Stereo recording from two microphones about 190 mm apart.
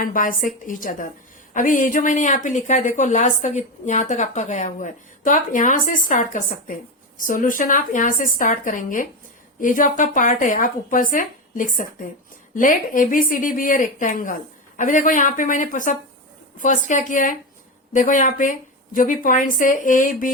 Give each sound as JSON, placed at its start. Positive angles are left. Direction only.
{"t": 0.0, "sound": "a woman's voice", "side_deg": 45}